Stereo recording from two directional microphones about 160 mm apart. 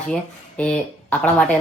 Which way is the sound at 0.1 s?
5° left (ahead or behind).